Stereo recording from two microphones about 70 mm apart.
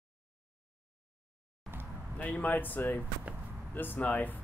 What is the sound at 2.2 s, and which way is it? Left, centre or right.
Speech, left.